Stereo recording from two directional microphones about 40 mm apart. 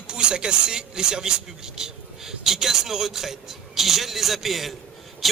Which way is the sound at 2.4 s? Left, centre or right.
Centre.